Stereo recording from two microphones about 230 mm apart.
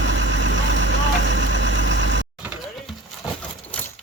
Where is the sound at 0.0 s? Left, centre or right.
Right.